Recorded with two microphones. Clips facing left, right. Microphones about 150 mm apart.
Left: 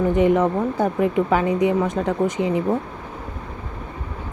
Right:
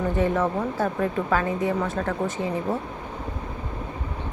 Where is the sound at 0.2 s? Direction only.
15° left (ahead or behind).